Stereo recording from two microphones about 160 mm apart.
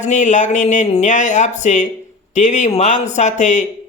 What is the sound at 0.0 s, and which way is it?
Speech, 50° left (ahead or behind).